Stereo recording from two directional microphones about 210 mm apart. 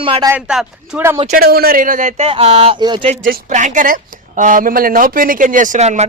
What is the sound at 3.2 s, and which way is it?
A woman's voice, 35° right (ahead or behind).